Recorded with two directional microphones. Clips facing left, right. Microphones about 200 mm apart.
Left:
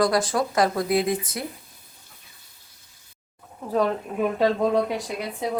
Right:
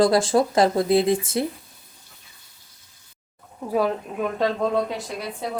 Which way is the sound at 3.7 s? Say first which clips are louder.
Even; 5° right (ahead or behind).